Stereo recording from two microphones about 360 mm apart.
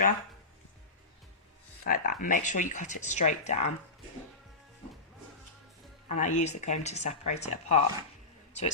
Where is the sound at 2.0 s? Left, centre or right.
Left.